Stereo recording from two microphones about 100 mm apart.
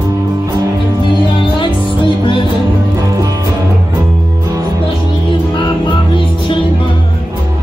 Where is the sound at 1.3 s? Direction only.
55° left (ahead or behind).